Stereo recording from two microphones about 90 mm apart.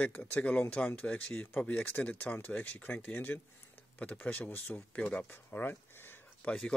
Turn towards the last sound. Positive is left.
turn(degrees=10)  # may be behind; listen again after turning